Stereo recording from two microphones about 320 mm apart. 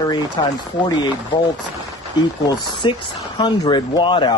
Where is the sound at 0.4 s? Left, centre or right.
Centre.